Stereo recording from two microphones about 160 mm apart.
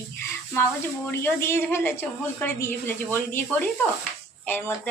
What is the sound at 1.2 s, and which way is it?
A woman's voice, 15° left (ahead or behind).